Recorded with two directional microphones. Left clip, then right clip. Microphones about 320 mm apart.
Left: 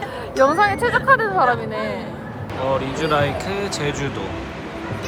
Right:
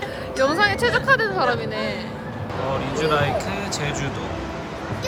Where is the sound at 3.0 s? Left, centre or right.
Centre.